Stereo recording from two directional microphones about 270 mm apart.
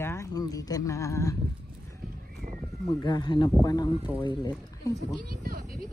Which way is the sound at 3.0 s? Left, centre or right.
Centre.